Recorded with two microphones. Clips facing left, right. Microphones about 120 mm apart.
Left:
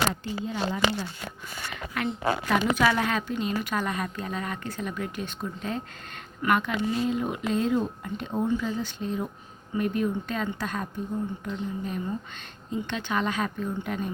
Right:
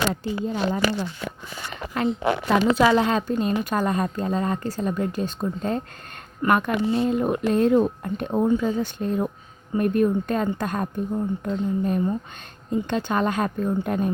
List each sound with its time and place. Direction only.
0.1 s speech: 45° right (ahead or behind)
2.2 s a woman's voice: 30° right (ahead or behind)
3.2 s a woman's voice: 40° right (ahead or behind)
6.8 s a woman's voice: 30° right (ahead or behind)
7.1 s a woman's voice: 50° right (ahead or behind)